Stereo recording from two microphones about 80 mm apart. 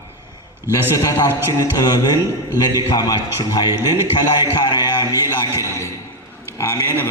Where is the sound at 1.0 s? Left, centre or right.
Left.